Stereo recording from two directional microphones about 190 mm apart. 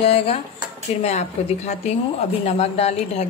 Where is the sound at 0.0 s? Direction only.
30° left (ahead or behind).